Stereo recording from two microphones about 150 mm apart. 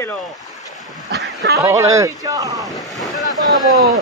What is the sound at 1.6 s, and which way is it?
Speech, 20° right (ahead or behind).